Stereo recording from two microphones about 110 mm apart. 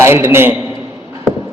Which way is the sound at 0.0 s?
20° right (ahead or behind).